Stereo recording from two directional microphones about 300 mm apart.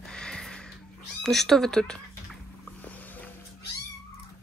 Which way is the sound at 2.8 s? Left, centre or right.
Centre.